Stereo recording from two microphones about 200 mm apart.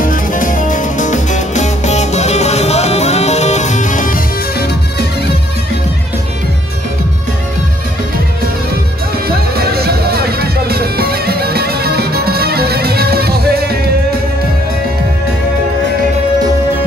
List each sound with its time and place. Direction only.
0.0 s music: 40° left (ahead or behind)
9.3 s music: 50° right (ahead or behind)